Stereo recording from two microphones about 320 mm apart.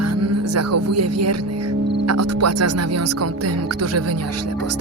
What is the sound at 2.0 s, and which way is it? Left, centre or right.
Speech, right.